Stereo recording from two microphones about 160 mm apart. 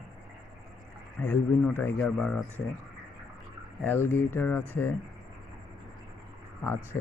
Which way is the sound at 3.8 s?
10° left (ahead or behind).